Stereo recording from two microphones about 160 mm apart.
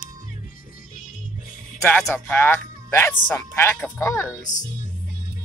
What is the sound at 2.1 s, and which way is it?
Speech, 15° left (ahead or behind).